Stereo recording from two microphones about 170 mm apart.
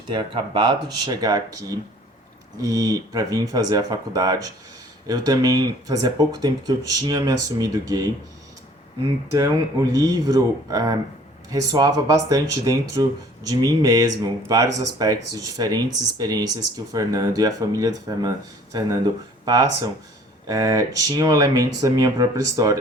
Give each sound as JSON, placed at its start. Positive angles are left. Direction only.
{"t": 0.1, "sound": "speech", "side_deg": -25}
{"t": 2.6, "sound": "speech", "side_deg": -20}
{"t": 9.3, "sound": "speech", "side_deg": -20}